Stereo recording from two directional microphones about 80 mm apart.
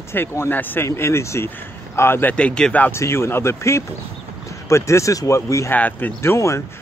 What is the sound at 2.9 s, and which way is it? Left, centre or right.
Speech, left.